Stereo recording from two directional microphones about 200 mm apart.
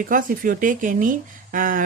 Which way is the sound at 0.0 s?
40° right (ahead or behind).